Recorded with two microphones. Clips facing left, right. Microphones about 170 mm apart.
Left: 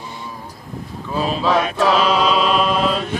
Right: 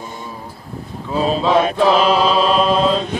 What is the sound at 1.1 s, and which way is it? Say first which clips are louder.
Mantra: right 3 dB; 25° right (ahead or behind).